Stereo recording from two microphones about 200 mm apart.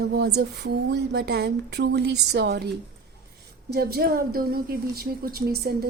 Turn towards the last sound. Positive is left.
turn(degrees=-50)  # may be behind; listen again after turning